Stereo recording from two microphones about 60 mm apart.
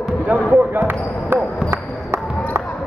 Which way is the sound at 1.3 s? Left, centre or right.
Right.